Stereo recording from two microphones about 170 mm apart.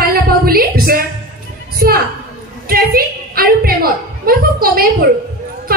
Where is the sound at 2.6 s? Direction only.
60° right (ahead or behind).